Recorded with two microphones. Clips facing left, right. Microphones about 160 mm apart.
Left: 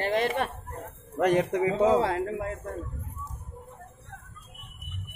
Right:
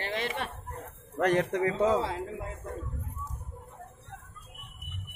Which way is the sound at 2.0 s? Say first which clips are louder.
Left 6 dB; 65° left (ahead or behind).